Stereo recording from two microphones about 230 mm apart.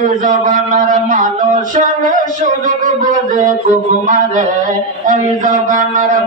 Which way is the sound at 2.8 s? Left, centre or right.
Right.